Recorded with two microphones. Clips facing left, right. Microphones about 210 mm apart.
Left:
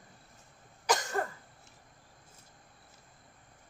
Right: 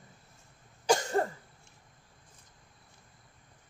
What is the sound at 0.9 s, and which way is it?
Cough, 30° right (ahead or behind).